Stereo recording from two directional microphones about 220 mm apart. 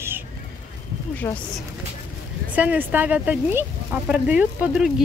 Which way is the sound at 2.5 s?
5° right (ahead or behind).